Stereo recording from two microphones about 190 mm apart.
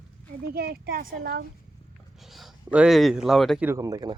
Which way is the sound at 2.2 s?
Centre (ahead or behind).